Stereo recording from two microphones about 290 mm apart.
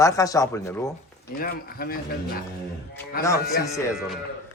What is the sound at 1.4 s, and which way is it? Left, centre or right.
Speech, left.